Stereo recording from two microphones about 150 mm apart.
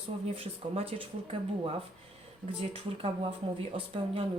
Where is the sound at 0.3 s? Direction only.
40° right (ahead or behind).